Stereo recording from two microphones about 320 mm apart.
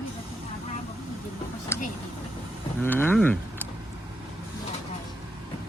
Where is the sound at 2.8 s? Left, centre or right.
Centre.